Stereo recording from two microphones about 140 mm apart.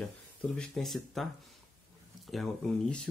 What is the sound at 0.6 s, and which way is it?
Speech, centre (ahead or behind).